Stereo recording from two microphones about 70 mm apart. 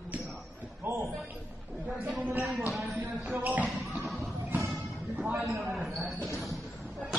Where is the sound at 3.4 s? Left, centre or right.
Right.